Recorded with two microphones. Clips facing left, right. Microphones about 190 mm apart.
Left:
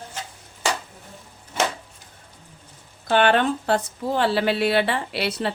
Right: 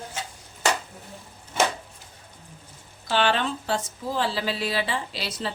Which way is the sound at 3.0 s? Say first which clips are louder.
Left 5 dB; 55° left (ahead or behind).